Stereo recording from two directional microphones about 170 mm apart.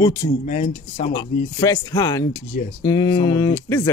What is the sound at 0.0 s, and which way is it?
Speech, 20° left (ahead or behind).